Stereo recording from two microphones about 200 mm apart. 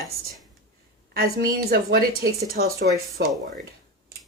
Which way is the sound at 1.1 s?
50° right (ahead or behind).